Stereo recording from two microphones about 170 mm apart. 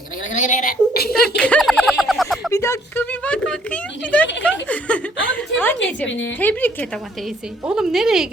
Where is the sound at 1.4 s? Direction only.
5° left (ahead or behind).